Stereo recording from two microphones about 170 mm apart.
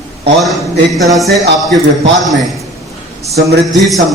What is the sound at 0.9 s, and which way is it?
A man's voice, centre (ahead or behind).